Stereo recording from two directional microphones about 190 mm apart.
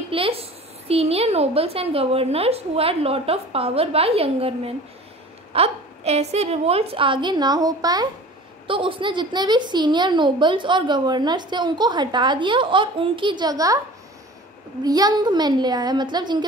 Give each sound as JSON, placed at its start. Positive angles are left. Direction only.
{"t": 0.1, "sound": "a woman's voice", "side_deg": -30}
{"t": 14.8, "sound": "a woman's voice", "side_deg": -20}